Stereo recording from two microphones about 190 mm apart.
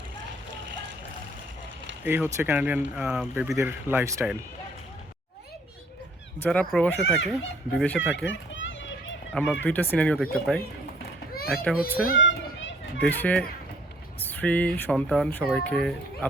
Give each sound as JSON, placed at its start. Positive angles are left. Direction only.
{"t": 2.0, "sound": "speech", "side_deg": -10}
{"t": 6.4, "sound": "speech", "side_deg": 5}
{"t": 8.1, "sound": "children playing", "side_deg": 80}
{"t": 9.3, "sound": "speech", "side_deg": 5}
{"t": 12.1, "sound": "children playing", "side_deg": 80}
{"t": 13.0, "sound": "speech", "side_deg": 10}